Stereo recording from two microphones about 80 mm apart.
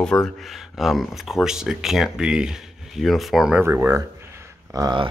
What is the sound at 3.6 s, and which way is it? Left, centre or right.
Speech, right.